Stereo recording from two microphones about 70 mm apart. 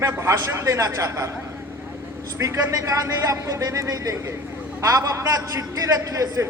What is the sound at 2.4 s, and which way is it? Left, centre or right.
A man's voice, right.